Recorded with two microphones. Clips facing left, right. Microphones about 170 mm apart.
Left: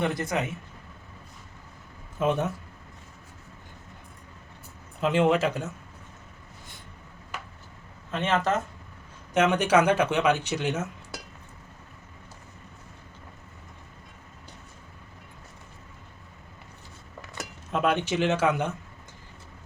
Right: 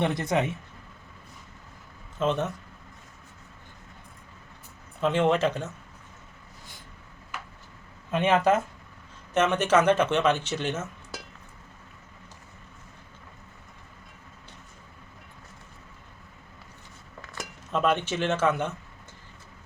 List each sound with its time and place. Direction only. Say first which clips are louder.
0.0 s speech: right 2 dB; 25° right (ahead or behind)
2.1 s speech: left 1 dB; 10° left (ahead or behind)
4.9 s speech: left 1 dB; 10° left (ahead or behind)
8.1 s speech: right 4 dB; 10° right (ahead or behind)
9.3 s speech: left 1 dB; 10° left (ahead or behind)
17.7 s speech: even; 10° left (ahead or behind)